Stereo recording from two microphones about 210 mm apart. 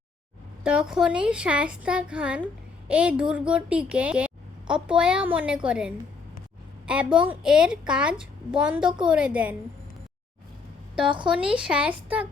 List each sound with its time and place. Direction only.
0.6 s a woman's voice: 5° right (ahead or behind)
11.0 s a woman's voice: 25° right (ahead or behind)
11.3 s a woman's voice: 5° right (ahead or behind)